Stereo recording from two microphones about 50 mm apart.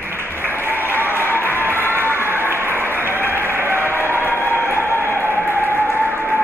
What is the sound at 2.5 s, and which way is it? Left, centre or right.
Applause, right.